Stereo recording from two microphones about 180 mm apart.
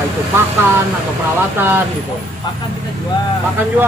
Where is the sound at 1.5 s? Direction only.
10° right (ahead or behind).